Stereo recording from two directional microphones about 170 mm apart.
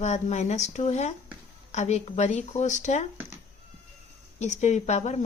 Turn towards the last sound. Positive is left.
turn(degrees=40)  # may be behind; listen again after turning